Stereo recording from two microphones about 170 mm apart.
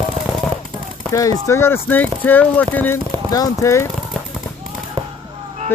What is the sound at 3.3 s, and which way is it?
Speech, 20° left (ahead or behind).